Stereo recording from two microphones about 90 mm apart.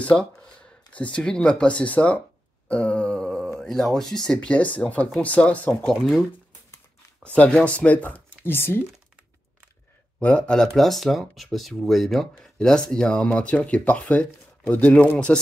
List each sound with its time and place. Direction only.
0.0 s speech: 10° left (ahead or behind)
2.7 s groan: 15° left (ahead or behind)
3.5 s speech: 5° left (ahead or behind)
7.3 s speech: 15° left (ahead or behind)
10.2 s speech: 15° left (ahead or behind)